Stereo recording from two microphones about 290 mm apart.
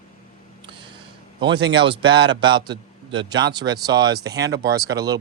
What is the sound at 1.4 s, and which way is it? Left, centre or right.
Speech, centre.